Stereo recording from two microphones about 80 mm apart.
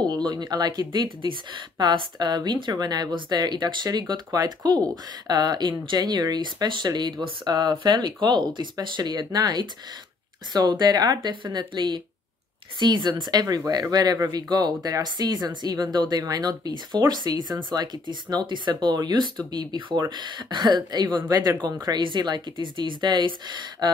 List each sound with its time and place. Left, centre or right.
0.0 s speech: right
13.2 s speech: right
21.3 s speech: right
21.8 s speech: right